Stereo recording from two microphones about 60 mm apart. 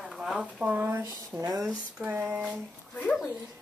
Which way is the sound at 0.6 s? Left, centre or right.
Right.